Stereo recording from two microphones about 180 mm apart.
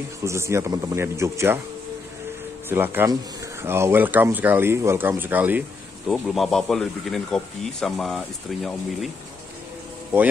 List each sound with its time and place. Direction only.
0.2 s speech: 15° right (ahead or behind)
2.7 s speech: 10° right (ahead or behind)